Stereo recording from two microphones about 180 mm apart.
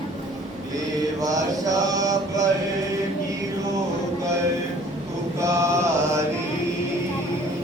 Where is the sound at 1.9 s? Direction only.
20° right (ahead or behind).